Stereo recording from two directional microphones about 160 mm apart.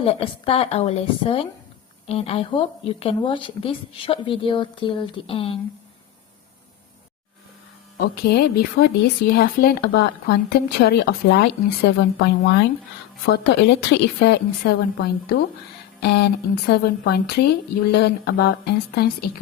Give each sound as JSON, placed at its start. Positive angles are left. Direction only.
{"t": 0.0, "sound": "speech", "side_deg": 35}
{"t": 8.1, "sound": "a woman's voice", "side_deg": 80}
{"t": 16.0, "sound": "speech", "side_deg": 90}
{"t": 17.9, "sound": "speech", "side_deg": 90}